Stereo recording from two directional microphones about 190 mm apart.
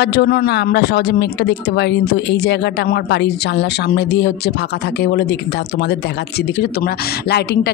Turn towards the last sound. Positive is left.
turn(degrees=60)  # may be behind; listen again after turning